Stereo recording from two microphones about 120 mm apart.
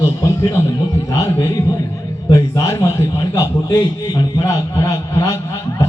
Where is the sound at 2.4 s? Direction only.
25° left (ahead or behind).